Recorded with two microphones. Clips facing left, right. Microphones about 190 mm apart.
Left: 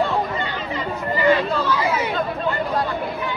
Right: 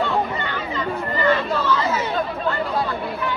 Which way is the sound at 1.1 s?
15° left (ahead or behind).